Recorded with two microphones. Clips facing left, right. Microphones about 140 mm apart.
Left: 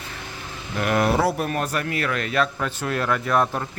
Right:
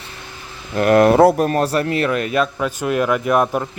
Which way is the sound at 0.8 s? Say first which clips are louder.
Right 9 dB; 50° right (ahead or behind).